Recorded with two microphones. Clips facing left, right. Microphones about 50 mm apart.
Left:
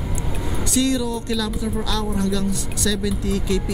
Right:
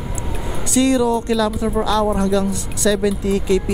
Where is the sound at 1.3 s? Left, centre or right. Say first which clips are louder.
Right 6 dB; right.